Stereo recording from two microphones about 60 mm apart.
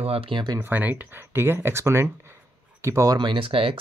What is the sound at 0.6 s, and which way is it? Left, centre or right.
Speech, right.